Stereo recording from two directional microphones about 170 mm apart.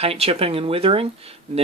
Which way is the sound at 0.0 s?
35° right (ahead or behind).